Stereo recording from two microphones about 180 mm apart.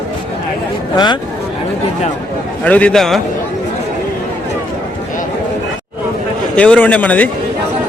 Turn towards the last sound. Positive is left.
turn(degrees=10)  # may be behind; listen again after turning